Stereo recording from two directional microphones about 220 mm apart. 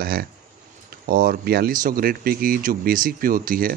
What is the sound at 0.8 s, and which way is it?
Speech, 40° right (ahead or behind).